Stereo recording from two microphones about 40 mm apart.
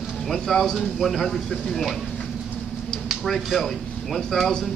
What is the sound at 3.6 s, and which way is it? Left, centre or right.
Speech, centre.